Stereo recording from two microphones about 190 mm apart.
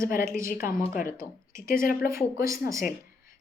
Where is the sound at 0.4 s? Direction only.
45° left (ahead or behind).